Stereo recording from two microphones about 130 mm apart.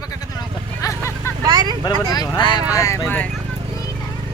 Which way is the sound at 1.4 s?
30° right (ahead or behind).